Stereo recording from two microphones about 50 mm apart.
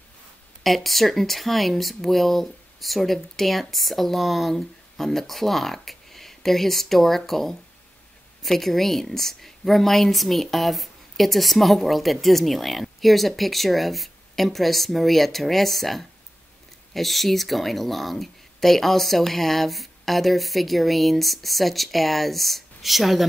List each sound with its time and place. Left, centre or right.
0.7 s a woman's voice: centre